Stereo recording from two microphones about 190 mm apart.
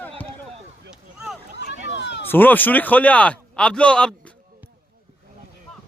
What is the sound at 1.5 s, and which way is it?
Run, 65° left (ahead or behind).